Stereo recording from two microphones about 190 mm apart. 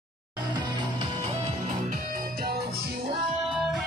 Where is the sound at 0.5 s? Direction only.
25° right (ahead or behind).